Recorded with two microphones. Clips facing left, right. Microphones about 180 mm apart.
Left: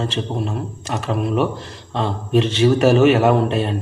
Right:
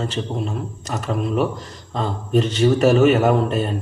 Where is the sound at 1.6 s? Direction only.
30° left (ahead or behind).